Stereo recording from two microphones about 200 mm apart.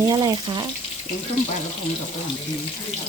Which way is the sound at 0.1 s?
20° right (ahead or behind).